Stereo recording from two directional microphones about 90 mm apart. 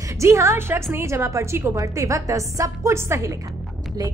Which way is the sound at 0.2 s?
30° right (ahead or behind).